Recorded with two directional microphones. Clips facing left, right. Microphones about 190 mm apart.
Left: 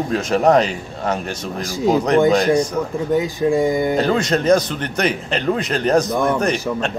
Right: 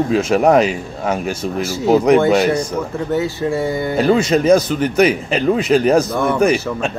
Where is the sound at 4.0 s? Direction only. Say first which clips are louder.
Right 4 dB; 10° right (ahead or behind).